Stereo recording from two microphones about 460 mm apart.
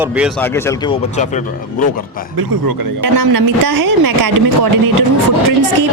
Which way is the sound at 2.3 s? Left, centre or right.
Right.